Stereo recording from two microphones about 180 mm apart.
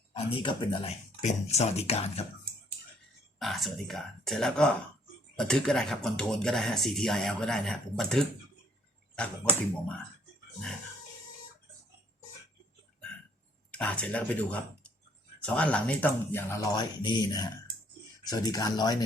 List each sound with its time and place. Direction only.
0.1 s speech: 30° left (ahead or behind)
3.3 s speech: centre (ahead or behind)
13.7 s speech: 5° left (ahead or behind)